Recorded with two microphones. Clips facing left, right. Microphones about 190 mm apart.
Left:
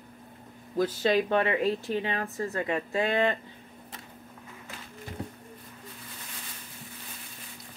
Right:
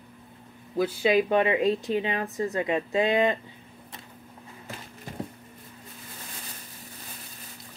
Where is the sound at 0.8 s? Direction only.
10° right (ahead or behind).